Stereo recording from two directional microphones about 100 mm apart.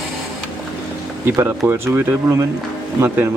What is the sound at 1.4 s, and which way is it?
Speech, 20° right (ahead or behind).